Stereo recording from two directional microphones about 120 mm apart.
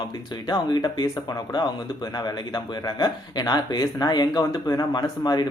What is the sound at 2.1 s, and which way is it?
A man's voice, 35° left (ahead or behind).